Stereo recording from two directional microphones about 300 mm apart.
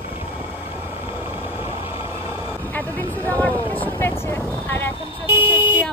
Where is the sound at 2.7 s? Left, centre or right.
Centre.